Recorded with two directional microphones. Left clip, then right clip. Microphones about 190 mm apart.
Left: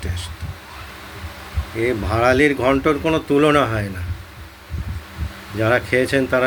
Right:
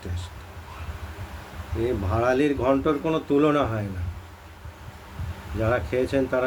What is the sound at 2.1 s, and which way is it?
Speech, 15° left (ahead or behind).